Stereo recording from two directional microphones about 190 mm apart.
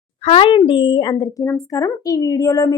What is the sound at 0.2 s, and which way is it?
A woman's voice, 30° left (ahead or behind).